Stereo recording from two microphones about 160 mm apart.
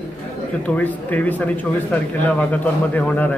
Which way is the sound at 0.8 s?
10° left (ahead or behind).